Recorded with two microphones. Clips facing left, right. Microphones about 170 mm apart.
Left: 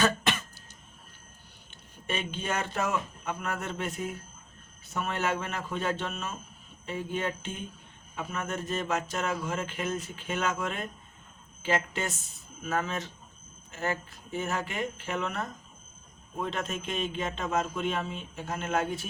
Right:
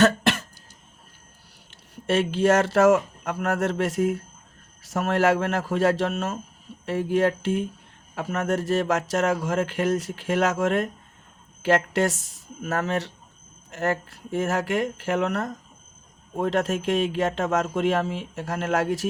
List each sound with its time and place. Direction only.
0.0 s cough: 75° right (ahead or behind)
1.7 s speech: 90° right